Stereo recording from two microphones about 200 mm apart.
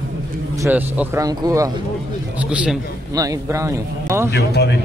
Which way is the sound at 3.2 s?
15° right (ahead or behind).